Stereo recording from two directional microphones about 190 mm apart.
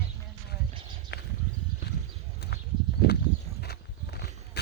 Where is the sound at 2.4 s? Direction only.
60° left (ahead or behind).